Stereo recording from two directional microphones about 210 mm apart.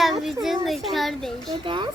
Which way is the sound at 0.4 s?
Centre (ahead or behind).